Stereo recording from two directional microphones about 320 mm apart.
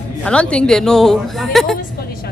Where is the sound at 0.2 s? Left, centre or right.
Centre.